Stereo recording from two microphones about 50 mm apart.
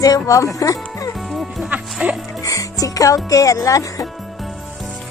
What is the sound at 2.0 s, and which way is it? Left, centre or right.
Speech, right.